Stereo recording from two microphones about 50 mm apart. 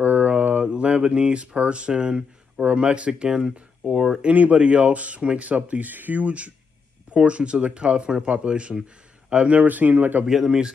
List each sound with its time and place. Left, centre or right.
0.0 s mantra: right
0.7 s speech: right
4.3 s speech: right
10.2 s speech: centre